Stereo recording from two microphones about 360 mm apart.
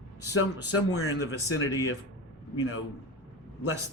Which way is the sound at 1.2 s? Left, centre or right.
Centre.